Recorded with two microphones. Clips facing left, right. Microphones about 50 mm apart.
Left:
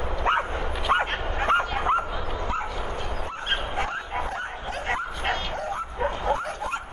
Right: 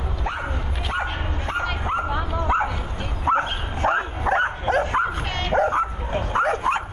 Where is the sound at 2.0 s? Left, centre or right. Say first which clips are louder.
Right 5 dB; right.